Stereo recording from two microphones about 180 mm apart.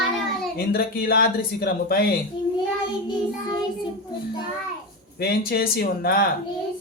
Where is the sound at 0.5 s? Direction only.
55° left (ahead or behind).